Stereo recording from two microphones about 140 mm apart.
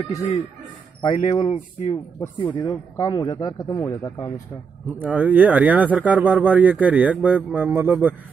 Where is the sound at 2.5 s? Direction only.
25° left (ahead or behind).